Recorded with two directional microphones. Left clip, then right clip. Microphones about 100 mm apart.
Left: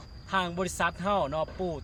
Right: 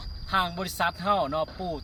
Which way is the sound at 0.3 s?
20° left (ahead or behind).